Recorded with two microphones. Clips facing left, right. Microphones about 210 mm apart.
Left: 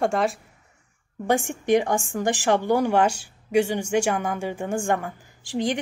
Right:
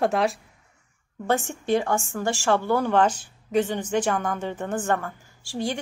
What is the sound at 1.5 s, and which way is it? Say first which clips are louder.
A woman's voice: left 3 dB; 15° left (ahead or behind).